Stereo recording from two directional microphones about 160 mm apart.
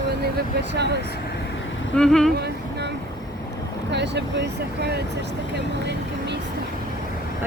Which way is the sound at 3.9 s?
90° right.